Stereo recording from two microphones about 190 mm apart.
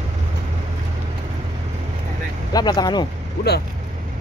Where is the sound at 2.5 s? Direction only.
20° left (ahead or behind).